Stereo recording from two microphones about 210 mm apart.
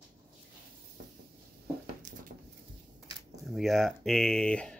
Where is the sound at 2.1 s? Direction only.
40° right (ahead or behind).